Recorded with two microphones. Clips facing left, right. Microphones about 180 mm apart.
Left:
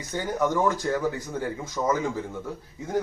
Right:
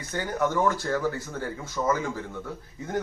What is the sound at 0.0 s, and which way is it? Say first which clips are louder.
Speech: left 1 dB; 15° left (ahead or behind).